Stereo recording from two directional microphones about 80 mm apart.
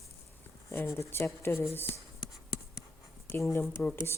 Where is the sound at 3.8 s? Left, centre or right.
Centre.